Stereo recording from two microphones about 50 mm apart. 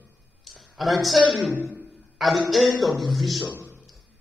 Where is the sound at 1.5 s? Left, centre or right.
Right.